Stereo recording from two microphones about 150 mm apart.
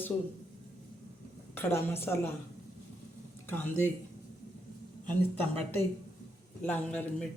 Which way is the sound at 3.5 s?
15° left (ahead or behind).